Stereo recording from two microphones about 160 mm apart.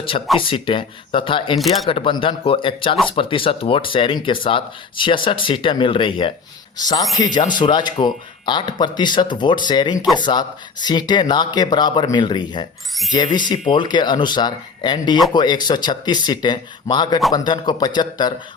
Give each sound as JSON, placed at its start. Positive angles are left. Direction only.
{"t": 0.3, "sound": "speech", "side_deg": 35}
{"t": 1.5, "sound": "speech", "side_deg": 0}
{"t": 1.9, "sound": "speech", "side_deg": 35}